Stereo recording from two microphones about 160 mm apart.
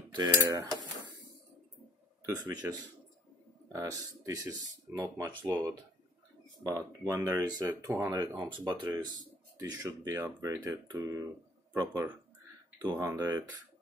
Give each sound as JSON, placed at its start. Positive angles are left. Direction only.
{"t": 0.2, "sound": "cutlery", "side_deg": -20}
{"t": 2.2, "sound": "speech", "side_deg": -25}
{"t": 3.7, "sound": "speech", "side_deg": -20}